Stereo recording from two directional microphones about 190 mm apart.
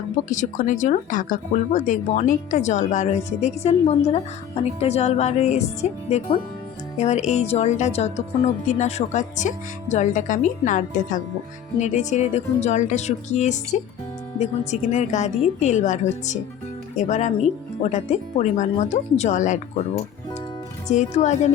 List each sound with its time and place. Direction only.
0.3 s speech: 40° left (ahead or behind)
20.8 s speech: 40° left (ahead or behind)